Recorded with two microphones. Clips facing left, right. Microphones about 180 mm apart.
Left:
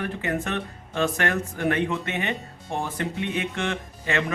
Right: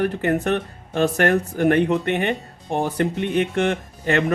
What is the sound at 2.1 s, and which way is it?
Speech, 60° right (ahead or behind).